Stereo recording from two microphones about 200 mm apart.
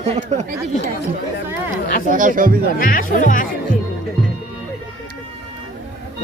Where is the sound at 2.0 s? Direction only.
40° right (ahead or behind).